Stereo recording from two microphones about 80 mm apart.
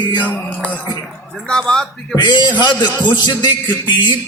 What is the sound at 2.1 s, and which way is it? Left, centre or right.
Music, left.